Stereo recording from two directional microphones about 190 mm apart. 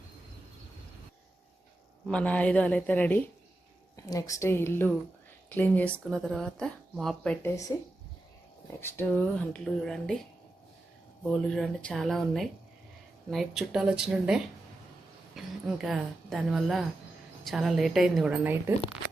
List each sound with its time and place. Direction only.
2.0 s a woman's voice: 5° left (ahead or behind)
7.4 s a woman's voice: 15° left (ahead or behind)
8.8 s speech: 10° left (ahead or behind)
11.3 s speech: 5° left (ahead or behind)
15.6 s speech: centre (ahead or behind)